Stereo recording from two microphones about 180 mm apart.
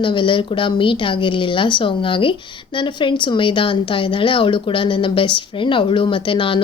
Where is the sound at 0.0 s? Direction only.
25° left (ahead or behind).